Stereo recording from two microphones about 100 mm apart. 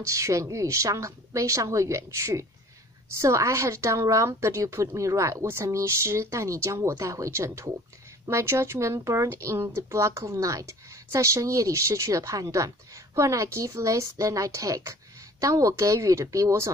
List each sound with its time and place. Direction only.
0.0 s a woman's voice: 30° right (ahead or behind)